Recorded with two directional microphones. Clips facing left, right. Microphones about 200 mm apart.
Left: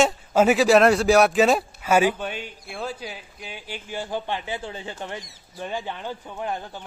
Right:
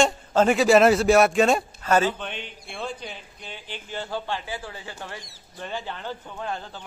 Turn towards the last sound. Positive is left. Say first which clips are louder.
# left 2 dB
turn(degrees=15)  # may be behind; listen again after turning